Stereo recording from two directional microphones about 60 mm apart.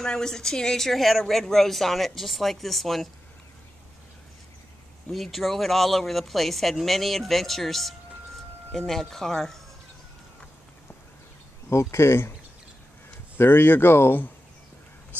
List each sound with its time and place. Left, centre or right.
0.0 s speech: centre
5.1 s speech: centre
11.7 s speech: left
13.4 s speech: left